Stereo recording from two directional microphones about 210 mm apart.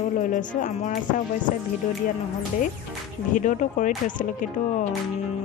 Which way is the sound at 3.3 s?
35° left (ahead or behind).